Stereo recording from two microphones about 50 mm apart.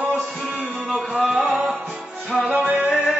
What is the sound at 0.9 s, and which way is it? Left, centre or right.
Music, centre.